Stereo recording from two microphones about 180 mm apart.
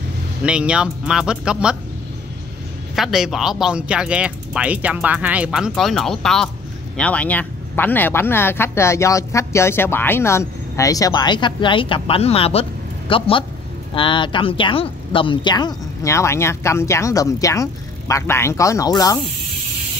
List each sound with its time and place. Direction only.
0.4 s speech: 5° right (ahead or behind)
3.0 s speech: centre (ahead or behind); by 19.1 s 20° left (ahead or behind)